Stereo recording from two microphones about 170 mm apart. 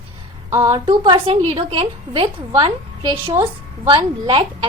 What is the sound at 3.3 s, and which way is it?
Speech, 15° right (ahead or behind).